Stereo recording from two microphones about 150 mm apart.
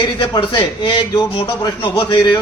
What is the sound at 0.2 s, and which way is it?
A man's voice, 30° left (ahead or behind).